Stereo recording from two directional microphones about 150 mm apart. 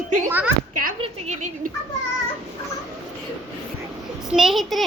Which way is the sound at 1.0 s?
50° right (ahead or behind).